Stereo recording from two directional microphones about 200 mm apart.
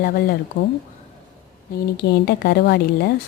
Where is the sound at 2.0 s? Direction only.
55° left (ahead or behind).